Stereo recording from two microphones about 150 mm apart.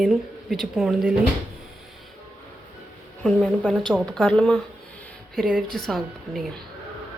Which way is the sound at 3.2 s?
5° left (ahead or behind).